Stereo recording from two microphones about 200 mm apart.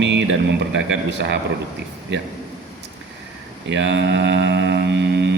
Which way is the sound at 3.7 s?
60° right (ahead or behind).